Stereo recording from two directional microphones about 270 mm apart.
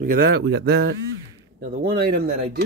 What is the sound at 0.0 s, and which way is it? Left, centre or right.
Speech, right.